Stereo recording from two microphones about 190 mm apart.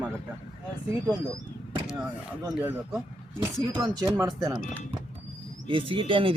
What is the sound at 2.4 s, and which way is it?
Speech, 10° right (ahead or behind).